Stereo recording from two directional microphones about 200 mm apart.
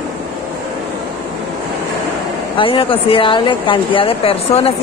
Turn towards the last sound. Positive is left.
turn(degrees=30)  # may be behind; listen again after turning